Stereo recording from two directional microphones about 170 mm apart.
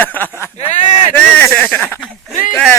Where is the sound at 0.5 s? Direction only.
45° left (ahead or behind).